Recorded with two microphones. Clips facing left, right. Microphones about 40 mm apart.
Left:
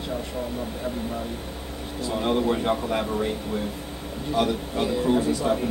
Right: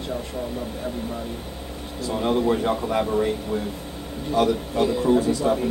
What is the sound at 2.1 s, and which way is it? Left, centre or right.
Speech, centre.